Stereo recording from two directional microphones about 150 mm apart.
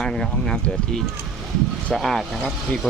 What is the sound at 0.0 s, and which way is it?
Speech, 5° left (ahead or behind).